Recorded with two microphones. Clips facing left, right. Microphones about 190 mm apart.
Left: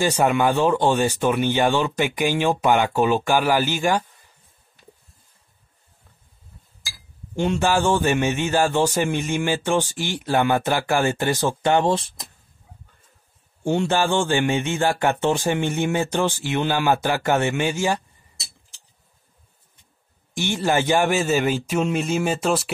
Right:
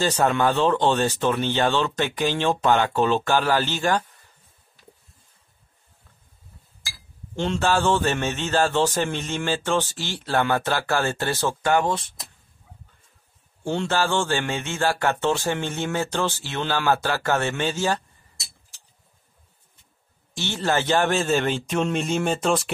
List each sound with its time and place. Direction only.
0.0 s a man's voice: 15° left (ahead or behind)
7.3 s a man's voice: 15° left (ahead or behind)
13.7 s a man's voice: 15° left (ahead or behind)
20.3 s a man's voice: 15° left (ahead or behind)